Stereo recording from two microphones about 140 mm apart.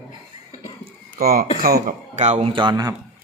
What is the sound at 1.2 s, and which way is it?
Speech, 90° right.